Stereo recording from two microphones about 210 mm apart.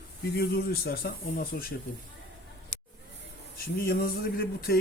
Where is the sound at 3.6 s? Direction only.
45° left (ahead or behind).